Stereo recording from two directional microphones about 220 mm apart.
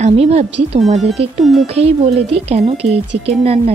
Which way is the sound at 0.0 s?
30° right (ahead or behind).